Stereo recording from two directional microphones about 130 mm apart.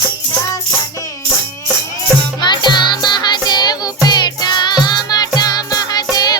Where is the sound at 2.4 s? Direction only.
35° left (ahead or behind).